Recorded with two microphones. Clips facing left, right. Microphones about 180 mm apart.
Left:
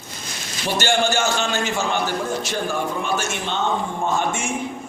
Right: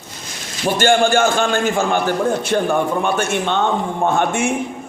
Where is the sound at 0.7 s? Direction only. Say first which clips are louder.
Right 6 dB; 50° right (ahead or behind).